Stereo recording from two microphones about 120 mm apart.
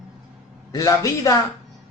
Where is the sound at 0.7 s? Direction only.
30° left (ahead or behind).